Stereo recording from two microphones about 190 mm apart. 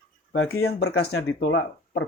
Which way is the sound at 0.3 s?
90° left.